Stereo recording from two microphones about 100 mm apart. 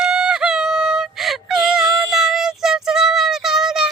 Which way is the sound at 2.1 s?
5° right (ahead or behind).